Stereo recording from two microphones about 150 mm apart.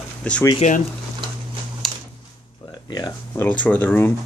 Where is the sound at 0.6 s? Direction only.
50° left (ahead or behind).